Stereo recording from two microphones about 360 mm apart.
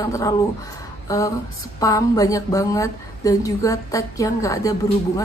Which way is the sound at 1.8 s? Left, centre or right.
Centre.